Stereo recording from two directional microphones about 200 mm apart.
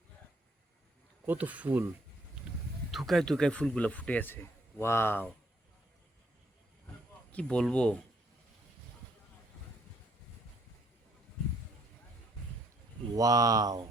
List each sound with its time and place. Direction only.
1.2 s speech: 10° right (ahead or behind)
2.9 s speech: centre (ahead or behind)
7.3 s speech: 5° left (ahead or behind)
13.1 s speech: 20° right (ahead or behind)